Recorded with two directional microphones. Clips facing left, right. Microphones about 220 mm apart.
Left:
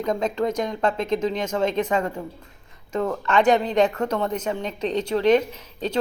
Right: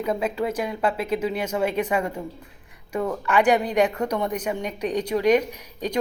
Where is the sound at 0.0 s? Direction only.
10° right (ahead or behind).